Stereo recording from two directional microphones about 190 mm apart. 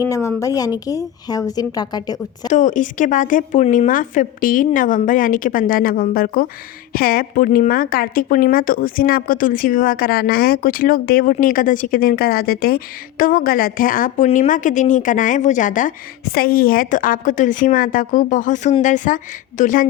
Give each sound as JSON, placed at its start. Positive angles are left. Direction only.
{"t": 0.1, "sound": "a woman's voice", "side_deg": 15}
{"t": 2.5, "sound": "speech", "side_deg": 40}